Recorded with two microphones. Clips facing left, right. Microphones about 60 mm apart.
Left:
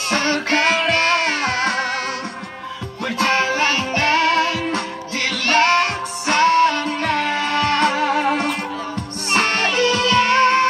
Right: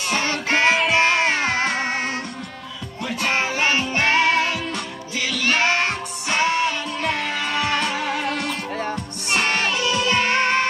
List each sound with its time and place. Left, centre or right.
0.1 s music: left
0.5 s music: right
3.3 s music: right
4.7 s music: left
5.7 s music: right
6.6 s music: left
7.4 s music: centre
7.7 s music: left
9.3 s music: left
10.0 s music: right